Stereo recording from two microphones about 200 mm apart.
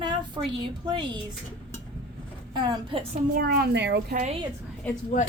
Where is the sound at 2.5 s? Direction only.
20° right (ahead or behind).